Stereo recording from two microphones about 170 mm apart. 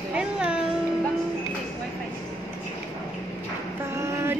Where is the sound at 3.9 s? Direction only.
15° right (ahead or behind).